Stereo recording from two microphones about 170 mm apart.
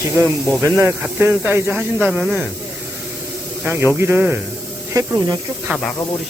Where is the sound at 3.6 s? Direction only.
10° right (ahead or behind).